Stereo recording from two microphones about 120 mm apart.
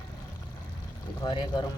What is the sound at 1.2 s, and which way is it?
Speech, 40° left (ahead or behind).